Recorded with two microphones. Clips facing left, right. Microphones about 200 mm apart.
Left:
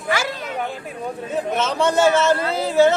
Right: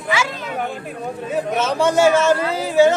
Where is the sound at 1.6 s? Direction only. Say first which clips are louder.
Right 2 dB; 10° right (ahead or behind).